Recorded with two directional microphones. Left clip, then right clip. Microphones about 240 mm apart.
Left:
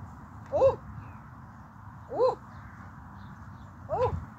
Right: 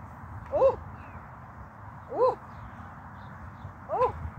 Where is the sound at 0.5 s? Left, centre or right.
Centre.